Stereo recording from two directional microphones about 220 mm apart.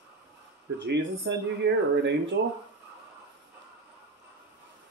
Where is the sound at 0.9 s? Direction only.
50° right (ahead or behind).